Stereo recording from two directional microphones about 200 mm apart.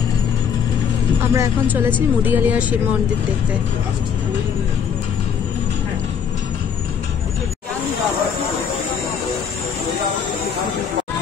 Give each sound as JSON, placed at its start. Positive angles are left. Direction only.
{"t": 1.3, "sound": "speech", "side_deg": -10}